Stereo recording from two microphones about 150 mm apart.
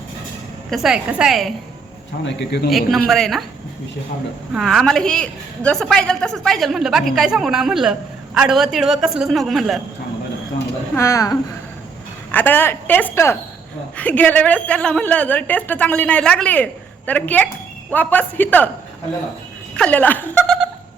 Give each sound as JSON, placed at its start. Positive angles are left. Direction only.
{"t": 0.7, "sound": "a woman's voice", "side_deg": 0}
{"t": 2.6, "sound": "a woman's voice", "side_deg": 0}
{"t": 4.5, "sound": "a woman's voice", "side_deg": 5}
{"t": 10.9, "sound": "a woman's voice", "side_deg": 20}
{"t": 19.7, "sound": "speech", "side_deg": 10}